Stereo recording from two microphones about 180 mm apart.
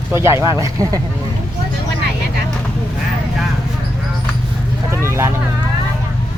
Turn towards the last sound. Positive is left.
turn(degrees=-15)  # may be behind; listen again after turning